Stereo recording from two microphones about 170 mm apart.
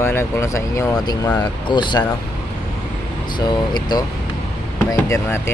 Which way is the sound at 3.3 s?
25° left (ahead or behind).